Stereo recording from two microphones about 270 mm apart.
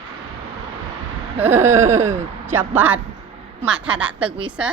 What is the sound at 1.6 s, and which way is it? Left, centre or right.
A woman's voice, centre.